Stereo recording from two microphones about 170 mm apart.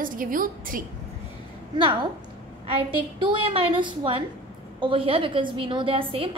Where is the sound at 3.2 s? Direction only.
30° right (ahead or behind).